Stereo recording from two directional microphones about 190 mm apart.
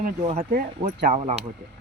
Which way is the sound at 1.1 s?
35° right (ahead or behind).